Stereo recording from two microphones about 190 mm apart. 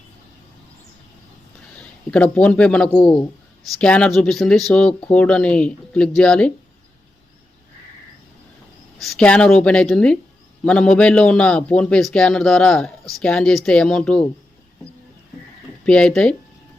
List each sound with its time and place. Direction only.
2.0 s a man's voice: 5° left (ahead or behind)
3.0 s a man's voice: 25° left (ahead or behind)
3.8 s a man's voice: 5° left (ahead or behind)
9.0 s a man's voice: 5° left (ahead or behind)
15.9 s a man's voice: 5° left (ahead or behind)